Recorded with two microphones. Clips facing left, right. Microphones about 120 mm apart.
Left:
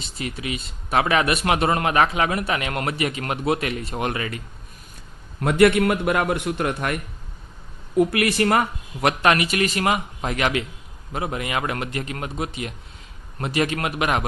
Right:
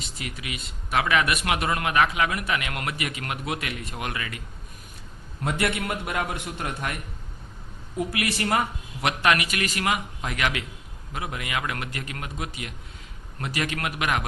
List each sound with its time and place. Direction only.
0.0 s a man's voice: 30° left (ahead or behind)
5.4 s a man's voice: 60° left (ahead or behind)
9.2 s a man's voice: 30° left (ahead or behind)